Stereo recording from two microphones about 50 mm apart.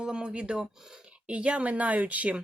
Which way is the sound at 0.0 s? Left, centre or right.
Centre.